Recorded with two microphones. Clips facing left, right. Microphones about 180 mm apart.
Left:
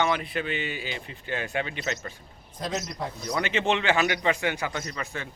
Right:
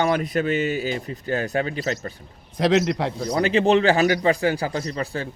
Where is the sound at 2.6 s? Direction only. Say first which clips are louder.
Right 12 dB; 80° right.